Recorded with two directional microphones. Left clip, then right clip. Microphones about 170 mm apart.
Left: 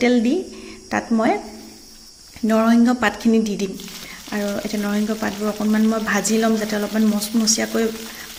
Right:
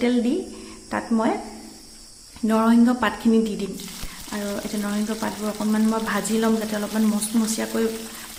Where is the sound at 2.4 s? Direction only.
10° left (ahead or behind).